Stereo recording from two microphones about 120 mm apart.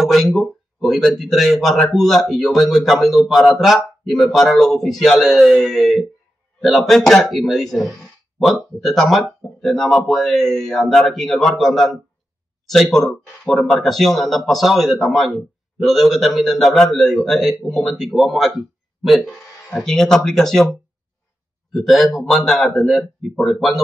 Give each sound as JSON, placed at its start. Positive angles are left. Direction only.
{"t": 0.0, "sound": "speech", "side_deg": 0}